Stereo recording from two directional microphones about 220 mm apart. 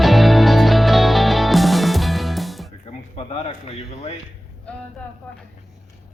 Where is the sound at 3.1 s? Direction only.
25° left (ahead or behind).